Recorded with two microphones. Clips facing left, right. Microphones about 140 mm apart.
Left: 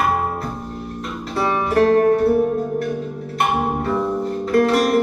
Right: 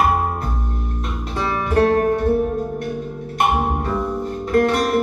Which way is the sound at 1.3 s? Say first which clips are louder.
Left 2 dB; 30° left (ahead or behind).